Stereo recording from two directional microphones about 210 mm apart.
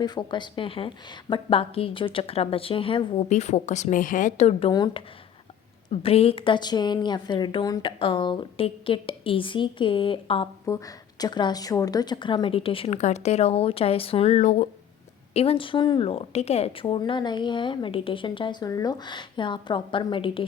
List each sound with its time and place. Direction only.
0.0 s speech: 20° left (ahead or behind)
4.7 s speech: 20° left (ahead or behind)